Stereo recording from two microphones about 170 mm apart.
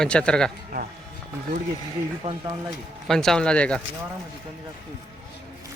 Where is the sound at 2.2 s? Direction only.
40° right (ahead or behind).